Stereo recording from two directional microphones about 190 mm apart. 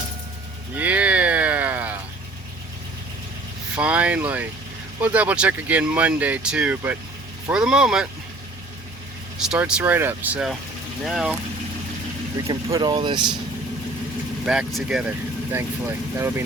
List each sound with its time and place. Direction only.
0.8 s a sound: 10° right (ahead or behind)
3.8 s speech: 5° right (ahead or behind)
9.5 s speech: 5° right (ahead or behind)
12.7 s speech: 25° right (ahead or behind)
14.4 s speech: 5° right (ahead or behind)